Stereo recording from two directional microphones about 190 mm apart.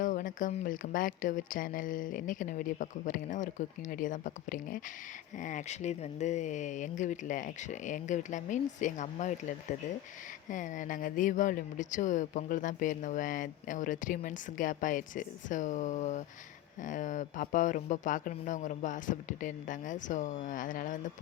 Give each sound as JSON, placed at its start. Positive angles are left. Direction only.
{"t": 0.0, "sound": "speech", "side_deg": 45}